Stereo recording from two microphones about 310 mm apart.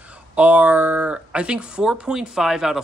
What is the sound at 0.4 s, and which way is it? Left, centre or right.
Speech, centre.